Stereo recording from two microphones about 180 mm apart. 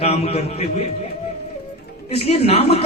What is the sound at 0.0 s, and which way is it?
Speech, 35° left (ahead or behind).